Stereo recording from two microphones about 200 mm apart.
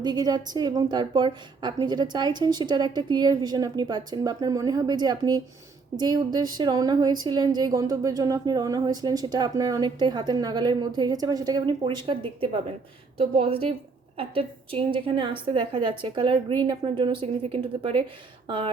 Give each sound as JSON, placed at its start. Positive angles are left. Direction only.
{"t": 0.0, "sound": "a woman's voice", "side_deg": -20}